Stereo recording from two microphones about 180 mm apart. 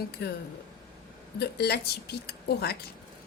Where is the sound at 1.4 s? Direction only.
60° left (ahead or behind).